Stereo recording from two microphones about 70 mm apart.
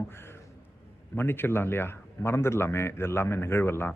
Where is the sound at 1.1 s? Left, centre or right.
Left.